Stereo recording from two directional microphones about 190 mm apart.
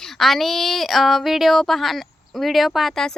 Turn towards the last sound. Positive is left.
turn(degrees=5)  # may be behind; listen again after turning